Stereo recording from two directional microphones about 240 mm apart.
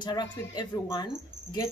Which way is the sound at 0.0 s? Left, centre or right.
Centre.